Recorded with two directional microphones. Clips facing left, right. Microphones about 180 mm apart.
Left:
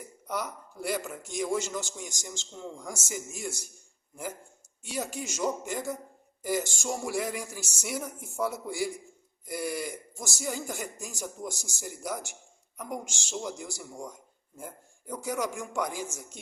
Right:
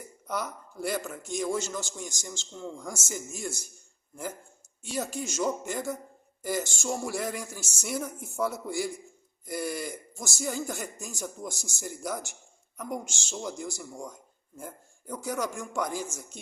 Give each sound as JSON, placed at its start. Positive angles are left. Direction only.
{"t": 0.3, "sound": "a man's voice", "side_deg": 10}
{"t": 4.8, "sound": "a man's voice", "side_deg": 10}